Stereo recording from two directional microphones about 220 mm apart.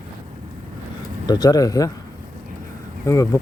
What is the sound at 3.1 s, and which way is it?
Speech, 15° left (ahead or behind).